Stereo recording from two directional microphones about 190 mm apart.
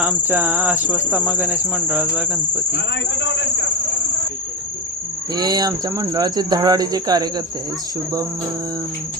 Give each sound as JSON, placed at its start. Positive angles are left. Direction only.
{"t": 0.0, "sound": "cricket", "side_deg": -10}
{"t": 2.7, "sound": "speech", "side_deg": 70}
{"t": 5.3, "sound": "speech", "side_deg": -20}